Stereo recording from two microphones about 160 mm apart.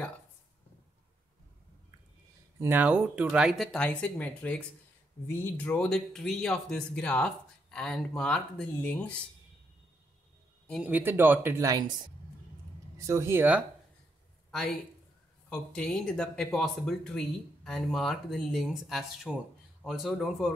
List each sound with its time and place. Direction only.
2.6 s speech: 10° right (ahead or behind); by 9.1 s 10° left (ahead or behind)
10.7 s speech: 10° right (ahead or behind)
12.9 s speech: 20° right (ahead or behind)
15.7 s speech: 5° left (ahead or behind)